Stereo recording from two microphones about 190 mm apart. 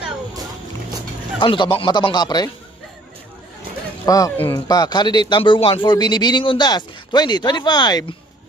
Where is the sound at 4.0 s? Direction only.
20° left (ahead or behind).